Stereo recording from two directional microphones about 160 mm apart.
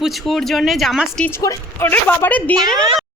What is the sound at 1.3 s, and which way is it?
A woman's voice, 20° left (ahead or behind).